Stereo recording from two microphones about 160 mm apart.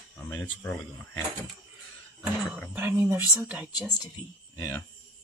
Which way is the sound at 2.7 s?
15° right (ahead or behind).